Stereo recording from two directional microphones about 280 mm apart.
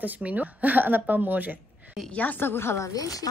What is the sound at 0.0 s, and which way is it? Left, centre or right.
A woman's voice, centre.